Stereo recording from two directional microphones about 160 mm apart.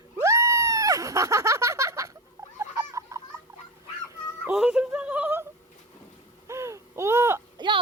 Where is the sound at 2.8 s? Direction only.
20° right (ahead or behind).